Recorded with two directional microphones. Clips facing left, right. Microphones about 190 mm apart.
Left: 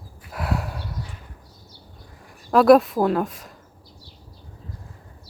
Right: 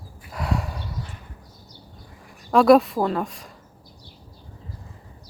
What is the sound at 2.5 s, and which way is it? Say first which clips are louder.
Speech: left 1 dB; centre (ahead or behind).